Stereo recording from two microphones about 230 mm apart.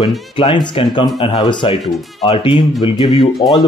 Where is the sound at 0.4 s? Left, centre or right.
Left.